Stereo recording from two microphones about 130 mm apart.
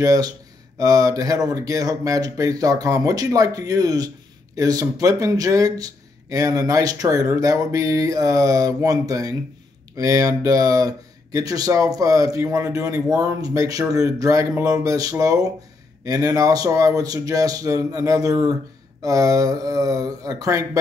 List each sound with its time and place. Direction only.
0.0 s speech: 25° right (ahead or behind)